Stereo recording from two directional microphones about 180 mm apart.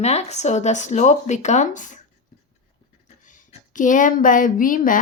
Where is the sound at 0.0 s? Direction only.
35° left (ahead or behind).